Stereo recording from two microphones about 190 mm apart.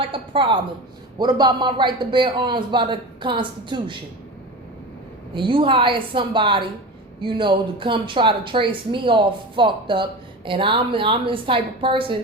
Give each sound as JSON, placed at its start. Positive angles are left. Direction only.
{"t": 0.0, "sound": "speech", "side_deg": -25}
{"t": 5.3, "sound": "speech", "side_deg": -25}